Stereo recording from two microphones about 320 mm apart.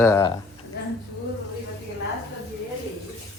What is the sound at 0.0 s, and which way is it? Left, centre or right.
Speech, centre.